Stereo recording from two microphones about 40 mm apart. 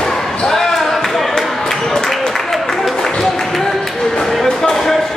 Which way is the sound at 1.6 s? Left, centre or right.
Centre.